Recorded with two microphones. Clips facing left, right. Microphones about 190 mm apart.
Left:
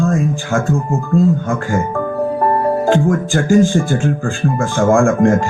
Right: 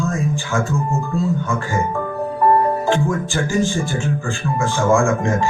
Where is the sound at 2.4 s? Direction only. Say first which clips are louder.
Even; 50° left (ahead or behind).